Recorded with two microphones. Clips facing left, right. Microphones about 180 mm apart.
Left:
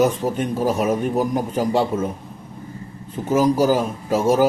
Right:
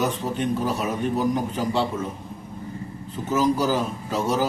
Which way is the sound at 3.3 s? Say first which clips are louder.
Left 5 dB; 45° left (ahead or behind).